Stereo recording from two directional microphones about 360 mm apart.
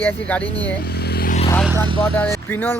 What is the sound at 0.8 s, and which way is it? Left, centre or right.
Vehicle, left.